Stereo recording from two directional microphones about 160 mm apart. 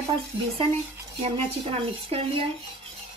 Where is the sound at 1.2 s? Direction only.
40° right (ahead or behind).